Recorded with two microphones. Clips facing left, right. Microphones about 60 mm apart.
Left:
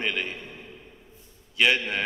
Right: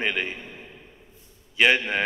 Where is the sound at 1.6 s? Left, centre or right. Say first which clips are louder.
Right 3 dB; centre.